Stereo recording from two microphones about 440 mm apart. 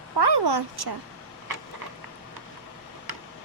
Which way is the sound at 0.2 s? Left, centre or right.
Right.